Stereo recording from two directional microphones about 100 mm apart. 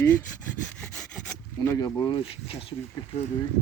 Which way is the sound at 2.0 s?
60° left (ahead or behind).